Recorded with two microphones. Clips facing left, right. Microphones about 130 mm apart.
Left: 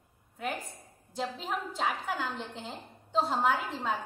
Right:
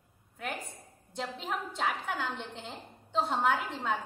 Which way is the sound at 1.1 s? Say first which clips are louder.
Left 2 dB; centre (ahead or behind).